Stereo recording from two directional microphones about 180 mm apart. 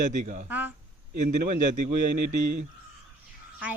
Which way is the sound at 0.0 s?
45° right (ahead or behind).